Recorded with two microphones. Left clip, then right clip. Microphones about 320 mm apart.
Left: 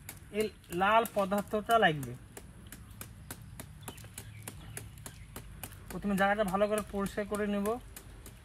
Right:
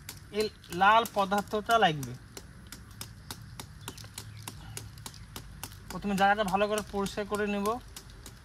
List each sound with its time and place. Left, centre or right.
0.3 s speech: centre
5.9 s speech: centre